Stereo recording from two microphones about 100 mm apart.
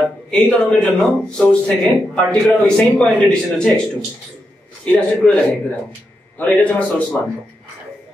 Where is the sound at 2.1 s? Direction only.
5° left (ahead or behind).